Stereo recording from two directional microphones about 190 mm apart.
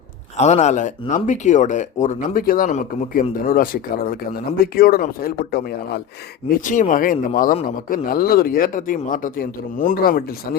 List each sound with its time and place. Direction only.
0.3 s speech: 35° left (ahead or behind); by 5.6 s 50° left (ahead or behind)
6.7 s speech: 45° left (ahead or behind)